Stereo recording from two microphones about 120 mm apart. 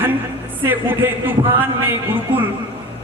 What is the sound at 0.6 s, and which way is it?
A man's voice, 15° right (ahead or behind).